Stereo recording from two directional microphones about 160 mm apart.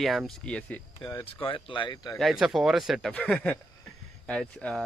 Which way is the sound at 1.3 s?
35° left (ahead or behind).